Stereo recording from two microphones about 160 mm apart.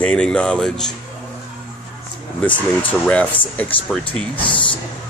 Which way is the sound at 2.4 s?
10° left (ahead or behind).